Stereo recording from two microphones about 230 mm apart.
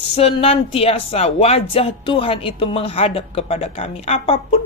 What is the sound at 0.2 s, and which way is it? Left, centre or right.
A woman's voice, left.